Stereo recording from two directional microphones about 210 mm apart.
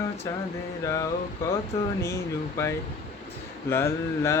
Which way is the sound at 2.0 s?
15° left (ahead or behind).